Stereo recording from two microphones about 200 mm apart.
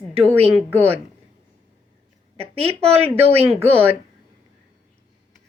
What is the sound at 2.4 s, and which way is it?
A woman's voice, 30° right (ahead or behind).